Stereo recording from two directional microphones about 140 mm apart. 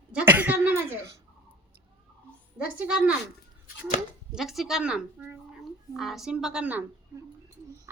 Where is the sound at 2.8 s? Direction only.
5° right (ahead or behind).